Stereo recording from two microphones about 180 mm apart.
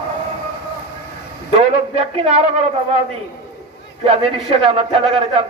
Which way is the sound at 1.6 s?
35° right (ahead or behind).